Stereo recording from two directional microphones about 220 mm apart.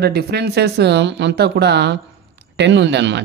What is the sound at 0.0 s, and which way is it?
Speech, 45° right (ahead or behind).